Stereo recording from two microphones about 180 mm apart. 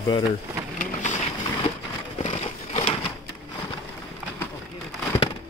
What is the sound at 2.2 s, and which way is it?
Crumpling, 35° left (ahead or behind).